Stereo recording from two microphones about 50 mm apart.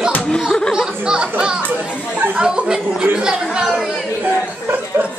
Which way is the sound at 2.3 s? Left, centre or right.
Centre.